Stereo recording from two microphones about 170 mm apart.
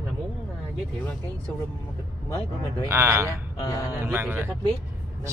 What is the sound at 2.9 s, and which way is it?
Speech, 15° right (ahead or behind).